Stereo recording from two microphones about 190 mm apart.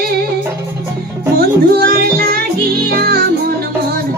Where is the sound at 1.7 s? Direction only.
50° right (ahead or behind).